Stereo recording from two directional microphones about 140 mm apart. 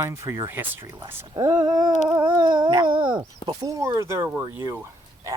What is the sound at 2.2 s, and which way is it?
Speech, 35° right (ahead or behind).